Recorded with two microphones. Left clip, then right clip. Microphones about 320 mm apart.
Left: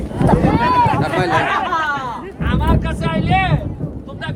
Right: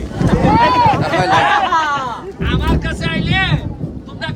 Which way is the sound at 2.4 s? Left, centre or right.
Centre.